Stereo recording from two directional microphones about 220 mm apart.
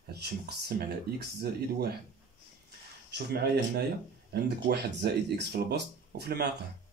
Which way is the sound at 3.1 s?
45° right (ahead or behind).